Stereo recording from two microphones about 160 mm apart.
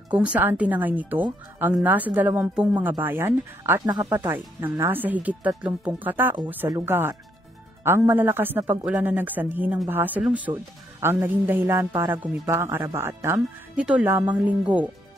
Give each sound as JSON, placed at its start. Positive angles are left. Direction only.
{"t": 0.1, "sound": "speech", "side_deg": -10}
{"t": 3.8, "sound": "speech", "side_deg": -25}
{"t": 4.2, "sound": "speech", "side_deg": -15}